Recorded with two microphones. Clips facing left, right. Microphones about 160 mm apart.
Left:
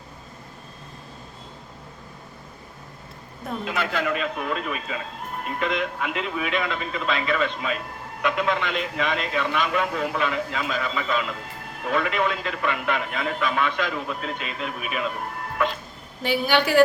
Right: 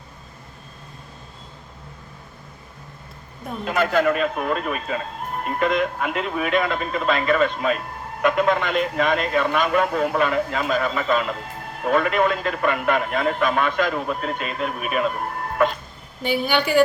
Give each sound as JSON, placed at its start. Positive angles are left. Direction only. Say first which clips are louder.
{"t": 3.6, "sound": "speech", "louder": "right 7 dB", "side_deg": -45}
{"t": 16.2, "sound": "a woman's voice", "louder": "even", "side_deg": 0}